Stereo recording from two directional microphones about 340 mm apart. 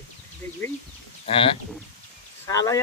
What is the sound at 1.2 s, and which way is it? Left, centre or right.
Speech, centre.